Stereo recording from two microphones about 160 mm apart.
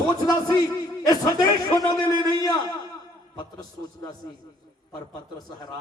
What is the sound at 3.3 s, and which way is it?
Speech, 25° left (ahead or behind).